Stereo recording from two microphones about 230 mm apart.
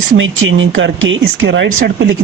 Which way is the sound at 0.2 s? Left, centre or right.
Right.